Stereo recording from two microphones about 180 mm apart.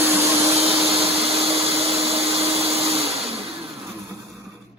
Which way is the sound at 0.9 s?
35° right (ahead or behind).